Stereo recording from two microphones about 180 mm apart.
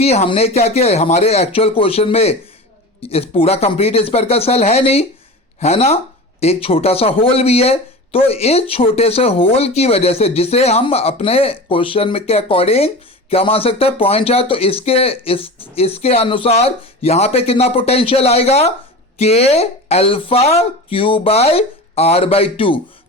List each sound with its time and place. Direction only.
0.0 s speech: 35° left (ahead or behind)